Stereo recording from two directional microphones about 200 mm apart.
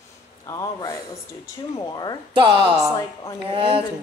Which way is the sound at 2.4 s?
25° right (ahead or behind).